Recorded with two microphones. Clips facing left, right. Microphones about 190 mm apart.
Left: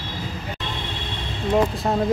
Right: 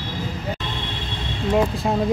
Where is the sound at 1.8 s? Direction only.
10° right (ahead or behind).